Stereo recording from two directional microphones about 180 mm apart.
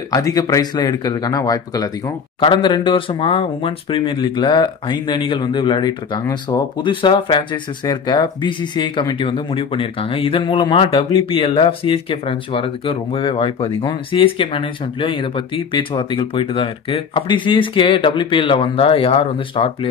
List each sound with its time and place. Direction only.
0.1 s speech: 20° left (ahead or behind)